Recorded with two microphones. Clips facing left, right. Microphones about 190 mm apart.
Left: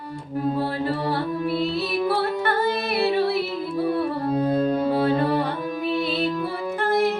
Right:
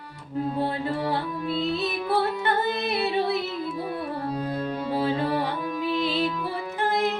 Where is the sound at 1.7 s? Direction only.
20° right (ahead or behind).